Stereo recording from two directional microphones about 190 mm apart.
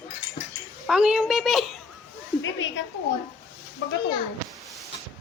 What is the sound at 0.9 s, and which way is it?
Speech, 5° right (ahead or behind).